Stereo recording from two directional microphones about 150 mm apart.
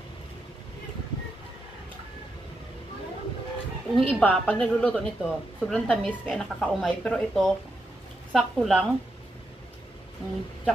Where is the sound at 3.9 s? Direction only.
5° left (ahead or behind).